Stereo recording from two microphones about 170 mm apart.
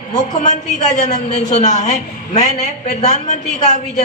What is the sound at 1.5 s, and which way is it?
A woman's voice, 45° left (ahead or behind).